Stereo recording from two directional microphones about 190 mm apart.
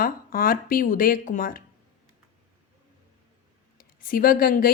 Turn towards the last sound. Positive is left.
turn(degrees=50)  # may be behind; listen again after turning